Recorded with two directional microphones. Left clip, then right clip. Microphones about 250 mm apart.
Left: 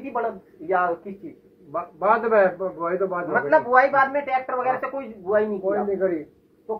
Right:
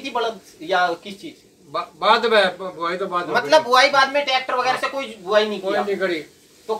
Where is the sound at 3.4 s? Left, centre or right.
Right.